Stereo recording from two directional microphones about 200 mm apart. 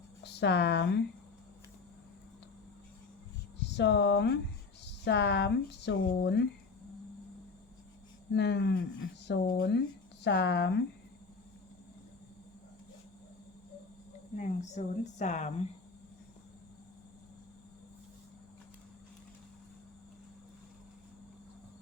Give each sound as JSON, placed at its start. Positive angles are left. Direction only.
{"t": 0.2, "sound": "speech", "side_deg": 60}
{"t": 3.6, "sound": "speech", "side_deg": 60}
{"t": 8.3, "sound": "speech", "side_deg": 60}
{"t": 14.3, "sound": "speech", "side_deg": 35}